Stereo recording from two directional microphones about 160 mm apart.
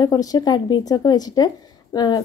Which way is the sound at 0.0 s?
25° left (ahead or behind).